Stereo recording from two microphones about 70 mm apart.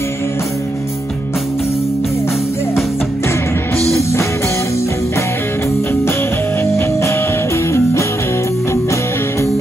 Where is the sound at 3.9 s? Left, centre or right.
Left.